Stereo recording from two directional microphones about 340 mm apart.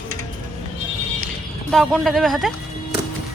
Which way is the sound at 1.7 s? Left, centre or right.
Centre.